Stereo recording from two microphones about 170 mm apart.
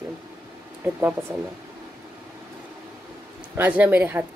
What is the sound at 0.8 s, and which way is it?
Speech, 10° right (ahead or behind).